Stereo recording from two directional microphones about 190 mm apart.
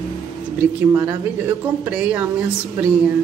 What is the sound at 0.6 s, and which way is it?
Speech, 10° right (ahead or behind).